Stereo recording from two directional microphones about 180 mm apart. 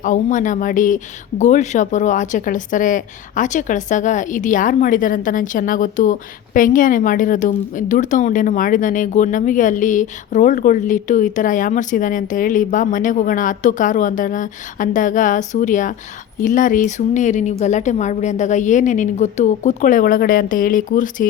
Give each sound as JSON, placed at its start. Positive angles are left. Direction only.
{"t": 0.0, "sound": "speech", "side_deg": 45}